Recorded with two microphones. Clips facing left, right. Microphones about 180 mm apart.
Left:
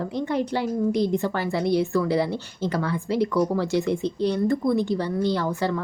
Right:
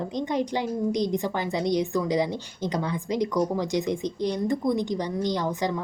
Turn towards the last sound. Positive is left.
turn(degrees=-15)  # may be behind; listen again after turning